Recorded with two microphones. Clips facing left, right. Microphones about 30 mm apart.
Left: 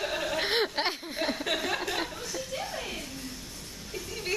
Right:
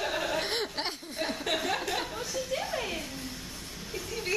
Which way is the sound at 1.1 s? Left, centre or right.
Centre.